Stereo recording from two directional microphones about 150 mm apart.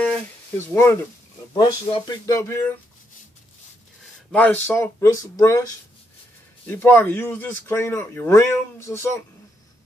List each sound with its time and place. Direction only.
0.6 s speech: 15° left (ahead or behind)
4.3 s speech: 10° left (ahead or behind)
6.7 s speech: 10° left (ahead or behind)